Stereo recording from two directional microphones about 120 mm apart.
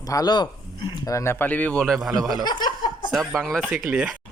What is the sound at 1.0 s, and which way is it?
A man's voice, 25° left (ahead or behind).